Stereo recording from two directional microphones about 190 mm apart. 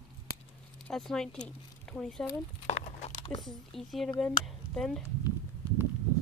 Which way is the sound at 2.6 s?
35° left (ahead or behind).